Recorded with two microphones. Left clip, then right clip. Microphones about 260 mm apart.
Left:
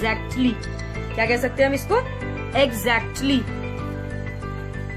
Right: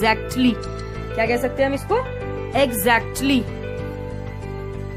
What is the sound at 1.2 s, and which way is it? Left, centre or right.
Speech, centre.